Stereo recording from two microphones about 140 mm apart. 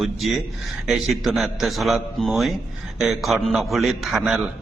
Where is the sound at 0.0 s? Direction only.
Centre (ahead or behind).